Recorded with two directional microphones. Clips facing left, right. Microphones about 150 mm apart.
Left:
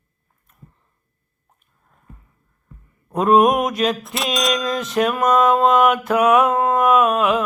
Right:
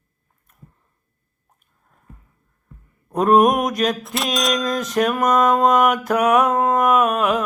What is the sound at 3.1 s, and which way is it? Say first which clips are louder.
Music: even; 40° right (ahead or behind).